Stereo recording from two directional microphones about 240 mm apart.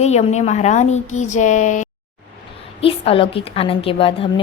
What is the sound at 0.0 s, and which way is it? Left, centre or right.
A woman's voice, left.